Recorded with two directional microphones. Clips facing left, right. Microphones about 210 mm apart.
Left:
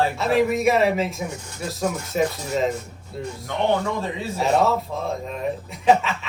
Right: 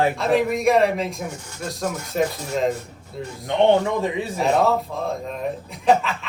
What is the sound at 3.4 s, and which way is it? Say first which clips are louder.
Speech: right 5 dB; 15° right (ahead or behind).